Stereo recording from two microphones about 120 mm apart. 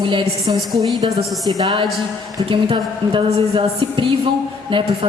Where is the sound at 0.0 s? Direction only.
45° right (ahead or behind).